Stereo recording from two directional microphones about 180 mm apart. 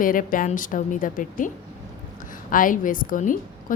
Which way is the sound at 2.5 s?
50° left (ahead or behind).